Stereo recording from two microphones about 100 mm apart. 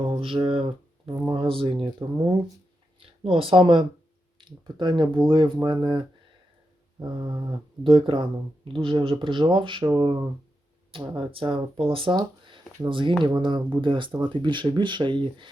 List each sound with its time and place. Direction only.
0.2 s speech: 60° right (ahead or behind)
3.2 s speech: 60° right (ahead or behind)
12.1 s a sound: 40° right (ahead or behind)
12.9 s speech: 55° right (ahead or behind)